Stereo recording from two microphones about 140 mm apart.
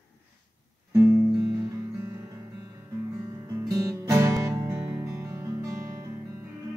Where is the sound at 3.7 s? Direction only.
20° right (ahead or behind).